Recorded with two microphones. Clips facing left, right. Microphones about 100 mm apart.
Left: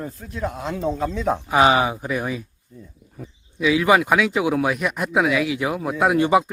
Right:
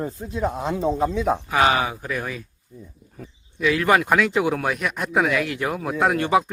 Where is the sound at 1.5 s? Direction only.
20° left (ahead or behind).